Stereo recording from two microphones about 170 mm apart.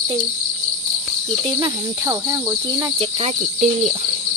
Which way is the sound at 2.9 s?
35° right (ahead or behind).